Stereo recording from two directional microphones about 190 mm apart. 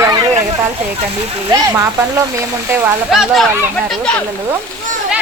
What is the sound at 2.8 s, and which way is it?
Speech, centre (ahead or behind).